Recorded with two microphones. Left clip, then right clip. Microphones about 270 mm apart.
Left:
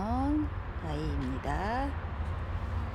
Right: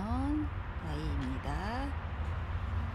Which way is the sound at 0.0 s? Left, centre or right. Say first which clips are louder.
Left 4 dB; centre.